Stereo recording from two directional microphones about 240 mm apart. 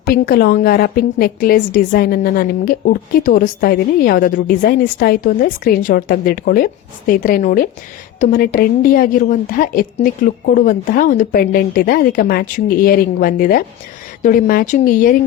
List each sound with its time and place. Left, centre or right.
0.0 s a woman's voice: left